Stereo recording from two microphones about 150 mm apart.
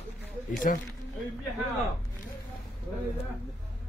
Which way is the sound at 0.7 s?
65° left (ahead or behind).